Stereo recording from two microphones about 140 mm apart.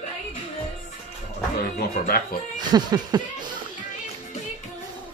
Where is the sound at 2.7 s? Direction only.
30° right (ahead or behind).